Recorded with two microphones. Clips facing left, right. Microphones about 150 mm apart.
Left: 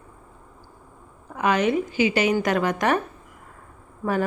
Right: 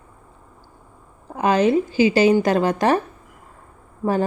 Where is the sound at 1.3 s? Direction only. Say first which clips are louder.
Right 4 dB; 30° right (ahead or behind).